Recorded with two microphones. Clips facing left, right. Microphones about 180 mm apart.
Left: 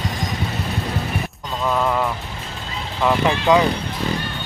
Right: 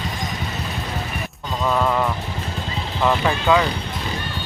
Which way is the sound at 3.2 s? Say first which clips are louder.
Left 3 dB; 20° left (ahead or behind).